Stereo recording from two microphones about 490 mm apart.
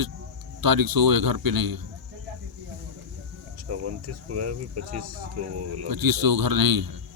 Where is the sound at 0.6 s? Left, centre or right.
Right.